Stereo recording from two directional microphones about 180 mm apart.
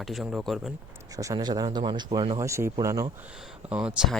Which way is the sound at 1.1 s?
20° right (ahead or behind).